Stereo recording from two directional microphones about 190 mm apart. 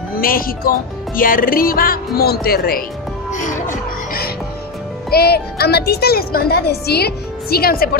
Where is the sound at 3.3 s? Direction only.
40° left (ahead or behind).